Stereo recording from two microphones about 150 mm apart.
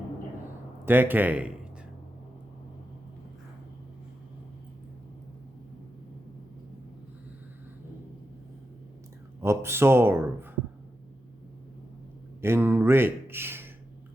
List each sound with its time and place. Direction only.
0.9 s speech: 15° right (ahead or behind)
9.4 s speech: 15° right (ahead or behind)
12.4 s speech: 15° right (ahead or behind)